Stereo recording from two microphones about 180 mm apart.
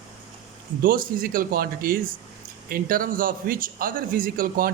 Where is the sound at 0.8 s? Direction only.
50° right (ahead or behind).